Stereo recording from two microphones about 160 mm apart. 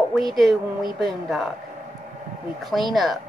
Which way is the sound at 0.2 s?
Centre (ahead or behind).